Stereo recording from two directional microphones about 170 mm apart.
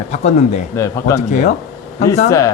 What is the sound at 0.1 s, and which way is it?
Speech, 40° left (ahead or behind).